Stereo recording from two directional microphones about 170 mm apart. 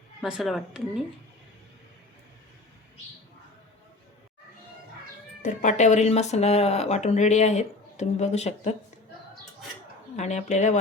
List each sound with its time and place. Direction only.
0.2 s speech: centre (ahead or behind)
5.4 s speech: 45° left (ahead or behind)
10.2 s speech: 40° left (ahead or behind)